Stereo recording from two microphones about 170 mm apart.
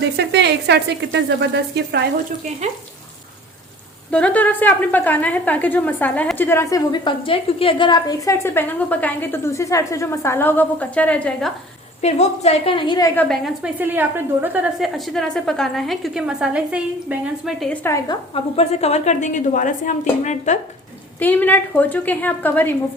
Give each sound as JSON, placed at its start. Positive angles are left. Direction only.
{"t": 0.2, "sound": "speech", "side_deg": -80}
{"t": 4.1, "sound": "a woman's voice", "side_deg": 10}
{"t": 12.0, "sound": "a woman's voice", "side_deg": 40}
{"t": 13.1, "sound": "a woman's voice", "side_deg": 5}
{"t": 13.7, "sound": "a woman's voice", "side_deg": -10}
{"t": 17.8, "sound": "a woman's voice", "side_deg": 20}
{"t": 18.3, "sound": "a woman's voice", "side_deg": 35}
{"t": 21.2, "sound": "a woman's voice", "side_deg": 10}